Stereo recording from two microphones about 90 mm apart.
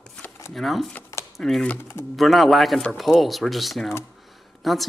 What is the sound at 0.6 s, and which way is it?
Speech, centre (ahead or behind).